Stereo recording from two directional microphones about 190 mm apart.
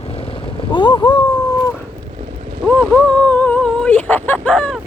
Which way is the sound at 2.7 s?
5° left (ahead or behind).